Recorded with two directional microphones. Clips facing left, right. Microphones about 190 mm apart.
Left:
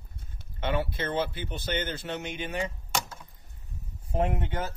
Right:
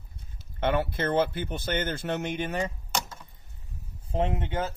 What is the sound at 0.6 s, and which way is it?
Speech, 55° right (ahead or behind).